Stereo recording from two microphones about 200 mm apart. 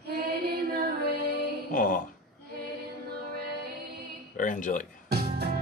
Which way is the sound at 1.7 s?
45° left (ahead or behind).